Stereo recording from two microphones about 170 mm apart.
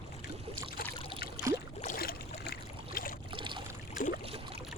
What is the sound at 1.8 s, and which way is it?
Boat, 60° left (ahead or behind).